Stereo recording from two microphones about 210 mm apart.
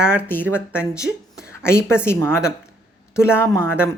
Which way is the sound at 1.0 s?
5° right (ahead or behind).